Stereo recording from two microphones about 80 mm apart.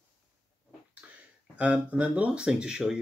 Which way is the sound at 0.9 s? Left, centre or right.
Centre.